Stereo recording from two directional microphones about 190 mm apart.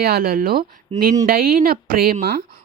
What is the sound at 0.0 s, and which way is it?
Speech, 50° right (ahead or behind).